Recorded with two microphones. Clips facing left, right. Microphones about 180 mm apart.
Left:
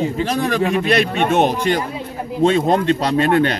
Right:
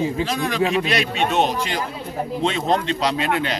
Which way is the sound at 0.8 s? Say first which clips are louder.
Left 5 dB; 55° left (ahead or behind).